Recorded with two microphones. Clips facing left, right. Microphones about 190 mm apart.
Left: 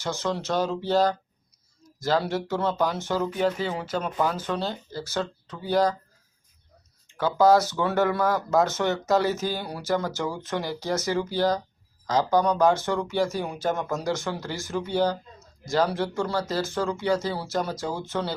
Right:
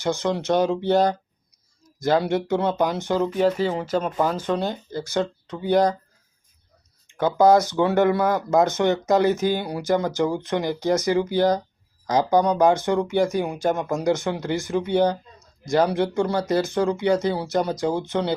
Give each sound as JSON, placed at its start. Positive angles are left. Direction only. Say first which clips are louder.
{"t": 0.0, "sound": "speech", "louder": "right 5 dB", "side_deg": -15}
{"t": 3.6, "sound": "speech", "louder": "right 5 dB", "side_deg": 0}
{"t": 4.2, "sound": "speech", "louder": "right 4 dB", "side_deg": -15}
{"t": 7.3, "sound": "speech", "louder": "right 3 dB", "side_deg": -20}